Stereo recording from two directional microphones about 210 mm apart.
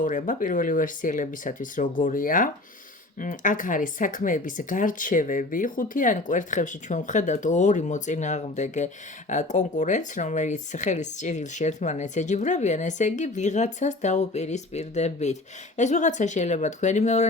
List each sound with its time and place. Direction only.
0.0 s speech: 40° left (ahead or behind)